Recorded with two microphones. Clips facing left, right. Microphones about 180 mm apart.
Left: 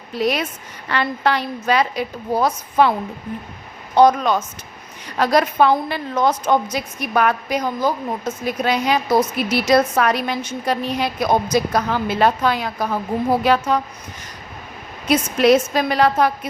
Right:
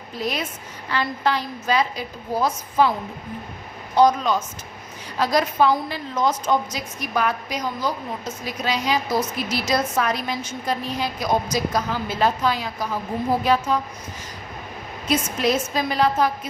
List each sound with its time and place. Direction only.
0.1 s a woman's voice: 70° left (ahead or behind)
3.9 s a woman's voice: 60° left (ahead or behind)
15.0 s a woman's voice: 70° left (ahead or behind)